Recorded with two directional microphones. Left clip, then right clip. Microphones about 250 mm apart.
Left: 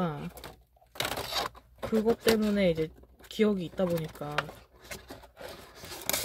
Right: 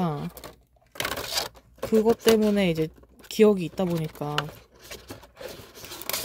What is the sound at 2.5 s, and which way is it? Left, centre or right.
Speech, right.